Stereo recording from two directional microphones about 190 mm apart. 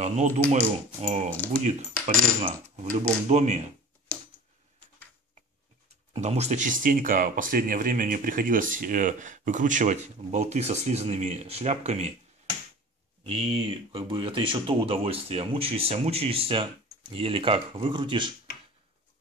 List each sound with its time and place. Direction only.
0.0 s speech: 35° right (ahead or behind)
1.6 s coin: 35° right (ahead or behind)
6.1 s coin: 35° right (ahead or behind)
6.8 s speech: 45° right (ahead or behind)
13.2 s speech: 30° right (ahead or behind)